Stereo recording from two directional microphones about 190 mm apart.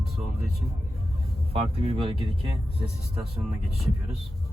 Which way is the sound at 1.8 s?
30° right (ahead or behind).